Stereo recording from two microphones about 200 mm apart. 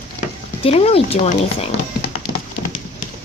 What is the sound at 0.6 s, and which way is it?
Speech, 30° left (ahead or behind).